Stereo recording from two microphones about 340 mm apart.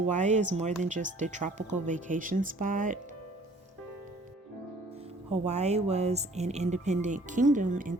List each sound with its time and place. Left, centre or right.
0.0 s speech: right
5.3 s speech: centre